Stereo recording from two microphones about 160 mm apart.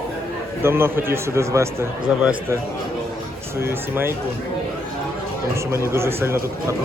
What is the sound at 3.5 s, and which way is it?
Speech, 15° right (ahead or behind).